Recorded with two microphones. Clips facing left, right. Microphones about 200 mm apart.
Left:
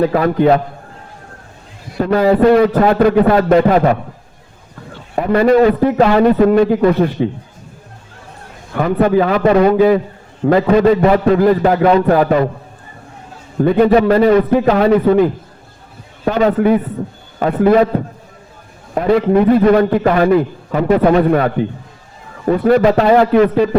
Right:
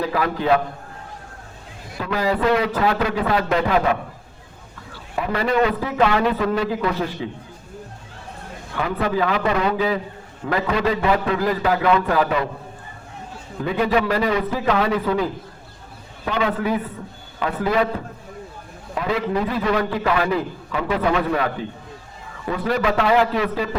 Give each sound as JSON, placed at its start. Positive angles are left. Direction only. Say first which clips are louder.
{"t": 0.0, "sound": "a man's voice", "louder": "left 10 dB", "side_deg": 50}
{"t": 2.0, "sound": "a man's voice", "louder": "left 10 dB", "side_deg": 50}
{"t": 5.1, "sound": "a man's voice", "louder": "left 10 dB", "side_deg": 50}
{"t": 8.7, "sound": "a man's voice", "louder": "left 10 dB", "side_deg": 50}
{"t": 13.6, "sound": "a man's voice", "louder": "left 10 dB", "side_deg": 50}
{"t": 16.2, "sound": "a man's voice", "louder": "left 9 dB", "side_deg": 45}
{"t": 18.9, "sound": "a man's voice", "louder": "left 10 dB", "side_deg": 50}
{"t": 23.3, "sound": "a man's voice", "louder": "left 12 dB", "side_deg": 55}